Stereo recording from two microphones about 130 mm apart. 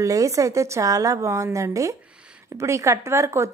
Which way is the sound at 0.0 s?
25° right (ahead or behind).